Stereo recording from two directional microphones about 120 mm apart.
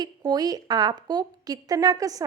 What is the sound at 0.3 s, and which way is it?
Speech, 35° right (ahead or behind).